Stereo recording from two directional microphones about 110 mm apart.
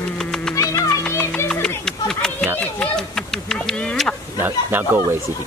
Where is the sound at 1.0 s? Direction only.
15° left (ahead or behind).